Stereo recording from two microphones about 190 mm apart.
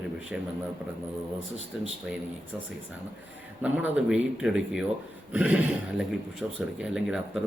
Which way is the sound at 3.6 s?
5° right (ahead or behind).